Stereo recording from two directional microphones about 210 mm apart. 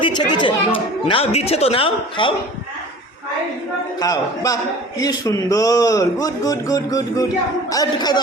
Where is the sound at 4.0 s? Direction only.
15° left (ahead or behind).